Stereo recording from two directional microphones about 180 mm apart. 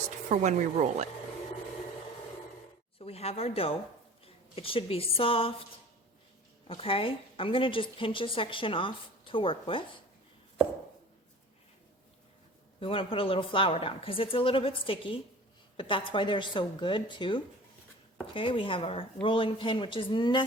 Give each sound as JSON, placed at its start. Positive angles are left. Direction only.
{"t": 0.3, "sound": "speech", "side_deg": -40}
{"t": 3.0, "sound": "a woman's voice", "side_deg": 35}
{"t": 6.7, "sound": "a woman's voice", "side_deg": 30}
{"t": 12.8, "sound": "a woman's voice", "side_deg": 30}